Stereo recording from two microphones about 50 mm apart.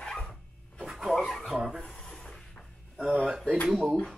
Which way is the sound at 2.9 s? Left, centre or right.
Right.